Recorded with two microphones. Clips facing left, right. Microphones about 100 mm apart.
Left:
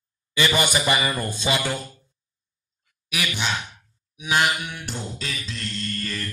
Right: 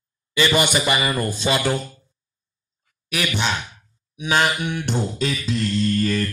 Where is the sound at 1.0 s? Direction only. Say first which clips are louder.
Right 3 dB; centre (ahead or behind).